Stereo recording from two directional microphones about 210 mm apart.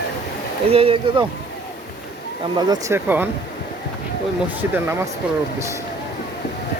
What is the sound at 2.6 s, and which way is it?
Speech, 15° right (ahead or behind).